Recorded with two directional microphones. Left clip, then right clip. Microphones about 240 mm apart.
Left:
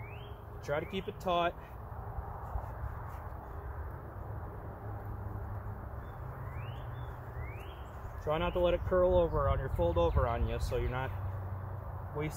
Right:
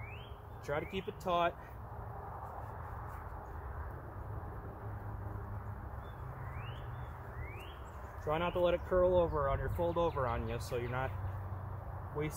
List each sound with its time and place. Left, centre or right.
0.7 s speech: centre
8.3 s speech: centre